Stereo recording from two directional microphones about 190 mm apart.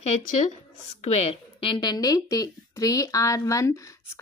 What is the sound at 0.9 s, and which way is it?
A woman's voice, 35° left (ahead or behind).